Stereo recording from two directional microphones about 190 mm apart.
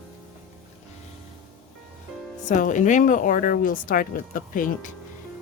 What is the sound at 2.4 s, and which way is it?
Speech, 40° left (ahead or behind).